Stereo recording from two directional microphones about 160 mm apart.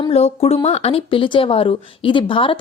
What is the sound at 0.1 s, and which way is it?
Speech, 40° left (ahead or behind).